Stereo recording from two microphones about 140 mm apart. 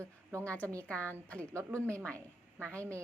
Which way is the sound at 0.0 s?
20° right (ahead or behind).